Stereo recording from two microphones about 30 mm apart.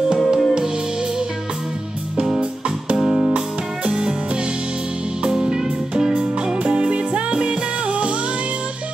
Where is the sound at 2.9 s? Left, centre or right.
Right.